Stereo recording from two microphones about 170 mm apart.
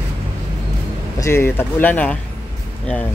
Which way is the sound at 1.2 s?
15° left (ahead or behind).